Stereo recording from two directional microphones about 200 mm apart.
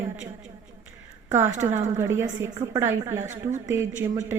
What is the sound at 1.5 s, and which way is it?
Speech, 35° right (ahead or behind).